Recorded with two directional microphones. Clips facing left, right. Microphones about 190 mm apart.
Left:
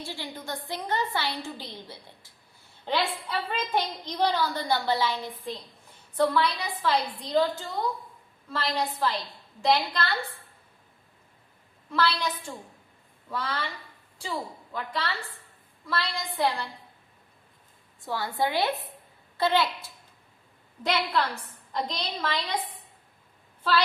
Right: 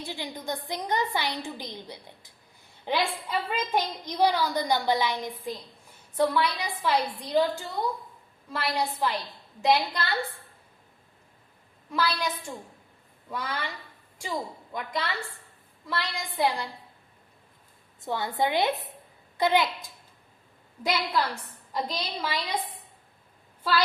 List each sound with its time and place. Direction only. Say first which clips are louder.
0.0 s a woman's voice: right 2 dB; 15° right (ahead or behind)
11.9 s a woman's voice: left 2 dB; 10° right (ahead or behind)
13.3 s a woman's voice: left 1 dB; 15° right (ahead or behind)
18.0 s a woman's voice: right 1 dB; 20° right (ahead or behind)
21.7 s a woman's voice: even; 10° right (ahead or behind)
23.6 s a woman's voice: left 1 dB; 10° right (ahead or behind)